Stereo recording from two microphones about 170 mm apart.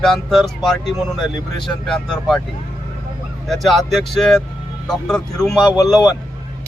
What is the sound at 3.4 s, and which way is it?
Speech, centre (ahead or behind).